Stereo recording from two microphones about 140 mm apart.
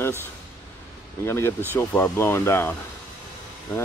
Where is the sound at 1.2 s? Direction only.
20° left (ahead or behind).